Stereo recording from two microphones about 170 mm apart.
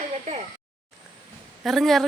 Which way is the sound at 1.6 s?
Centre (ahead or behind).